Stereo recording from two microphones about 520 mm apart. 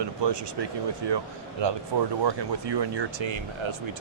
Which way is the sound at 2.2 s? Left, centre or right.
Right.